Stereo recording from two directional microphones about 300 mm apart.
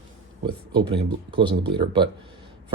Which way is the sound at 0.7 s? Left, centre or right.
Centre.